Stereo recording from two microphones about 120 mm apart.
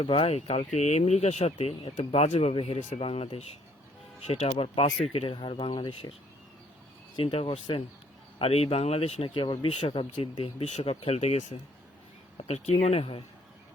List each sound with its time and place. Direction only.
0.0 s speech: 50° left (ahead or behind)
5.1 s speech: 40° left (ahead or behind)
7.2 s speech: 45° left (ahead or behind)
8.4 s speech: 55° left (ahead or behind)